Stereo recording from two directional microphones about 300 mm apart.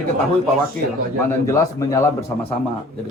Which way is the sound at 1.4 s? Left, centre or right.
Centre.